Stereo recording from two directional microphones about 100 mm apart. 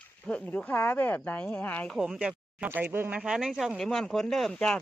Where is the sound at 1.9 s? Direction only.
5° right (ahead or behind).